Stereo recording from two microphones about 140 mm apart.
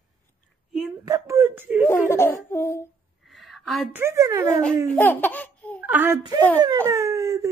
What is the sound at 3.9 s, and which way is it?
Speech, 20° right (ahead or behind).